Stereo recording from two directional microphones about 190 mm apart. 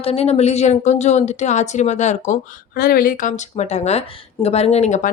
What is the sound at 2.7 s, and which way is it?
A woman's voice, 50° left (ahead or behind).